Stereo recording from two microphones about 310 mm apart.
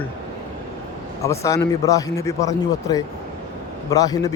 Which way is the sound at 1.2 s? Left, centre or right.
Centre.